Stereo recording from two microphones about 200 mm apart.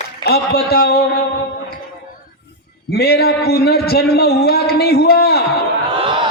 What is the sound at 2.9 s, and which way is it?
A man's voice, 50° left (ahead or behind).